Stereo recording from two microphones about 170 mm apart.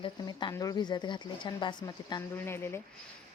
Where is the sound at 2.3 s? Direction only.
15° left (ahead or behind).